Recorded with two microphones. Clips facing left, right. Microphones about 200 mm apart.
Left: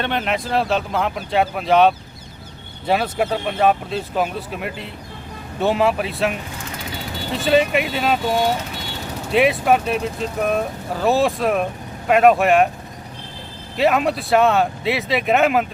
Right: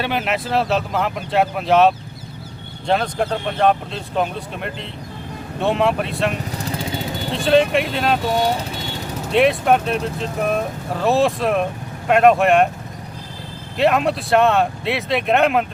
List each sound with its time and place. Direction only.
0.0 s speech: 5° right (ahead or behind)
6.6 s vehicle: 35° right (ahead or behind)
7.3 s speech: 5° left (ahead or behind)
9.3 s speech: centre (ahead or behind)
13.7 s speech: centre (ahead or behind)